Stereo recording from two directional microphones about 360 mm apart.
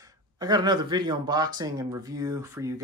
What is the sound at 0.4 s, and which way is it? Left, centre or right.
Speech, centre.